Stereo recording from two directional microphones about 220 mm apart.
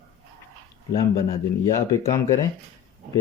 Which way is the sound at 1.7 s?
15° left (ahead or behind).